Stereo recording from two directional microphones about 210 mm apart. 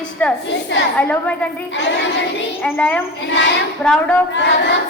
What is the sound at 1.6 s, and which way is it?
Child singing, 60° left (ahead or behind).